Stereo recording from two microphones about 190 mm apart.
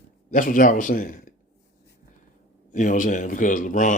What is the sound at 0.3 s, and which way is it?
Speech, 45° left (ahead or behind).